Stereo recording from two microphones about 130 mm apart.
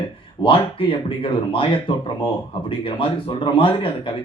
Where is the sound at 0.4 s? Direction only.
45° left (ahead or behind).